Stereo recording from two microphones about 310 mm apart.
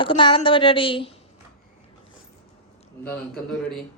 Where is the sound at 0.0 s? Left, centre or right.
Centre.